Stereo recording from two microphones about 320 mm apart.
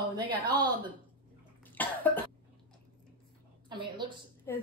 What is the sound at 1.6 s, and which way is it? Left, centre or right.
Cough, centre.